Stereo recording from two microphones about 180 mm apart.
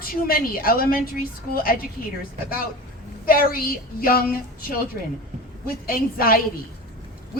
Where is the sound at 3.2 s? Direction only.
55° left (ahead or behind).